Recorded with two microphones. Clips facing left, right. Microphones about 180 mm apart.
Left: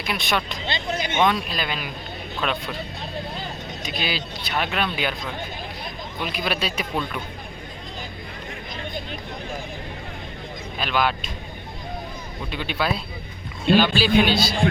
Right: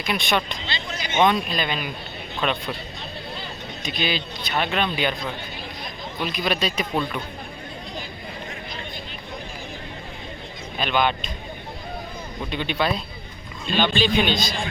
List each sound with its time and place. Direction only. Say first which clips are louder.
0.1 s speech: right 2 dB; 5° left (ahead or behind)
0.7 s music: left 6 dB; 55° left (ahead or behind)
1.2 s speech: right 3 dB; centre (ahead or behind)
3.8 s speech: right 2 dB; 5° left (ahead or behind)
6.2 s a man's voice: right 2 dB; 5° left (ahead or behind)
10.8 s speech: right 1 dB; 5° left (ahead or behind)
12.5 s a man's voice: right 1 dB; 5° left (ahead or behind)